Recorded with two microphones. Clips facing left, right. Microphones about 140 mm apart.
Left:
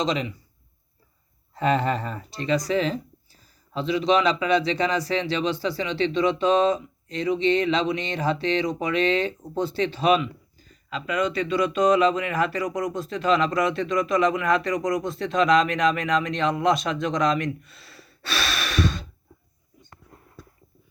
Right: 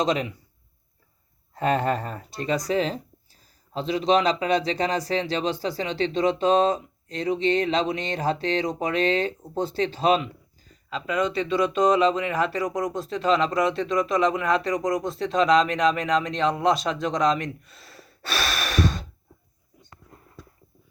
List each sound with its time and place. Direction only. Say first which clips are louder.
0.0 s speech: right 1 dB; 50° right (ahead or behind)
1.5 s speech: even; 50° right (ahead or behind)